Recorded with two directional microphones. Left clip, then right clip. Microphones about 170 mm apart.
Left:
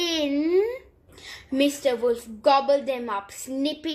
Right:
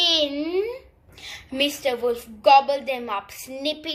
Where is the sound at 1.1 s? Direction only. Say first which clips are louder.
Left 2 dB; 40° left (ahead or behind).